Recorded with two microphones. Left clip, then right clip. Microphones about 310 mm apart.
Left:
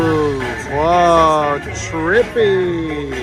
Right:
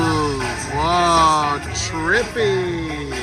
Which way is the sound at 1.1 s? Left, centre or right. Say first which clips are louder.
Left 3 dB; centre.